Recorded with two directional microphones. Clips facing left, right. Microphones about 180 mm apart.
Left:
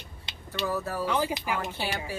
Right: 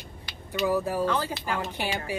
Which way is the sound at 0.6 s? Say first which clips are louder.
Right 5 dB; 15° right (ahead or behind).